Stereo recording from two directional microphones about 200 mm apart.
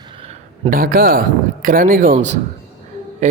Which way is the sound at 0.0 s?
25° right (ahead or behind).